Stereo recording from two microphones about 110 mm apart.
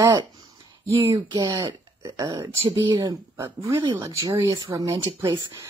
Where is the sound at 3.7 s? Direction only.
45° right (ahead or behind).